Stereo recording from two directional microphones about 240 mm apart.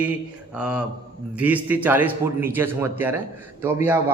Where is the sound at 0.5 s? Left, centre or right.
Centre.